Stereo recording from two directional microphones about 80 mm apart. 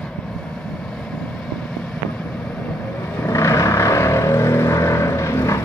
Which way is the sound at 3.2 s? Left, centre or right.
Left.